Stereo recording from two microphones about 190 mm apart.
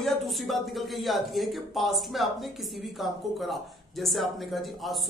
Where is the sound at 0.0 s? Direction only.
Centre (ahead or behind).